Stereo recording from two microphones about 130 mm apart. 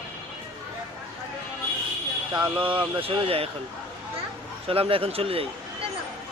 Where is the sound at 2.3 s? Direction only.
10° right (ahead or behind).